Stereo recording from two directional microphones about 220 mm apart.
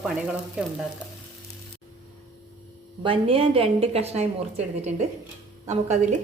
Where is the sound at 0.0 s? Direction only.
5° right (ahead or behind).